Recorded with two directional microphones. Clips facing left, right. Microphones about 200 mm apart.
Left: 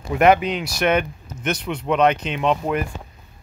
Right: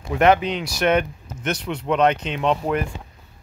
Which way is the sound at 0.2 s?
10° left (ahead or behind).